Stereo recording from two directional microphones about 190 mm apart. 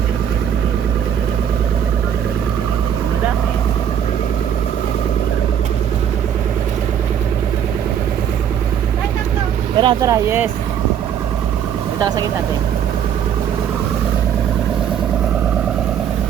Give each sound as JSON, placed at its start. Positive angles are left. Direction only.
{"t": 9.7, "sound": "speech", "side_deg": -20}